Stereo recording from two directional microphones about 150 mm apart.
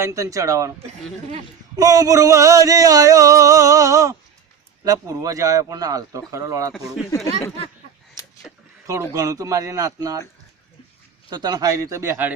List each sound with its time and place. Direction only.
0.0 s speech: 20° right (ahead or behind)
1.7 s speech: 25° right (ahead or behind)
8.2 s a sound: 25° left (ahead or behind)
9.1 s speech: 20° right (ahead or behind)
11.3 s speech: 25° right (ahead or behind)